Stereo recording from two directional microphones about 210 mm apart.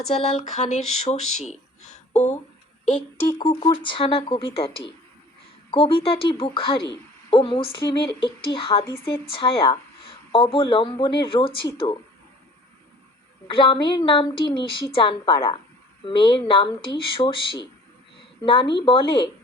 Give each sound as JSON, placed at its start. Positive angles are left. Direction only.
{"t": 0.1, "sound": "speech", "side_deg": 30}
{"t": 3.2, "sound": "speech", "side_deg": 20}
{"t": 5.7, "sound": "speech", "side_deg": 25}
{"t": 13.5, "sound": "speech", "side_deg": 25}